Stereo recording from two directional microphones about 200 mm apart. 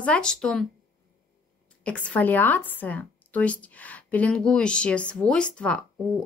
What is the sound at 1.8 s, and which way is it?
A woman's voice, 5° left (ahead or behind).